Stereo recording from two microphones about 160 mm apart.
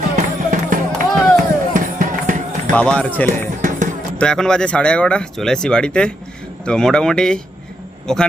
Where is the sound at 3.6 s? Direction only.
55° right (ahead or behind).